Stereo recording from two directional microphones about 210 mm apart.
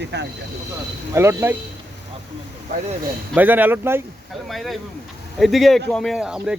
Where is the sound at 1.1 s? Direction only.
10° right (ahead or behind).